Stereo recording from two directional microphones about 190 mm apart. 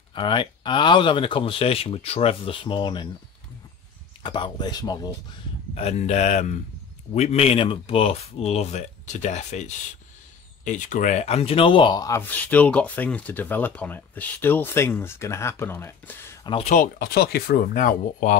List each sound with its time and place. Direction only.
0.1 s speech: 25° left (ahead or behind)
4.2 s speech: 25° left (ahead or behind)
5.8 s speech: 35° left (ahead or behind); by 16.3 s 10° left (ahead or behind)
16.4 s speech: 30° left (ahead or behind)
16.7 s speech: 50° left (ahead or behind)